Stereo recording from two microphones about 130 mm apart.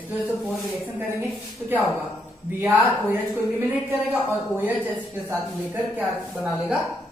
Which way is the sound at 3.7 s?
15° right (ahead or behind).